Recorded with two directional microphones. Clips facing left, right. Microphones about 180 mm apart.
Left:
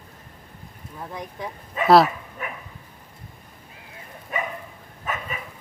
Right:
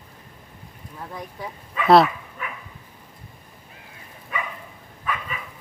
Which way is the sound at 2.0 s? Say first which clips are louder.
Even; 40° left (ahead or behind).